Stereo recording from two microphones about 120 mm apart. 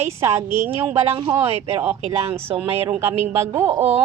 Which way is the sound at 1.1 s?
45° right (ahead or behind).